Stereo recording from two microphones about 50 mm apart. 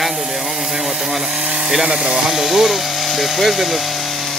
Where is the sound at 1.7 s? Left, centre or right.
Centre.